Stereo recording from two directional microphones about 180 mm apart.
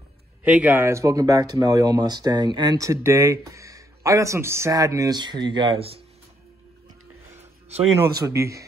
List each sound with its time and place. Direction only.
0.4 s speech: 10° right (ahead or behind); by 6.0 s 30° right (ahead or behind)
8.2 s speech: 15° right (ahead or behind)